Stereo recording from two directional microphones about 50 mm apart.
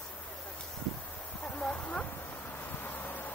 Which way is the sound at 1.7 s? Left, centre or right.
Left.